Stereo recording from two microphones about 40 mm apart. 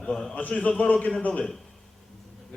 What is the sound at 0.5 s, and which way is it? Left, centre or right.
Speech, left.